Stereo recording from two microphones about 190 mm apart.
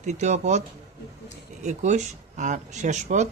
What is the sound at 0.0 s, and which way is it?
Speech, 40° right (ahead or behind).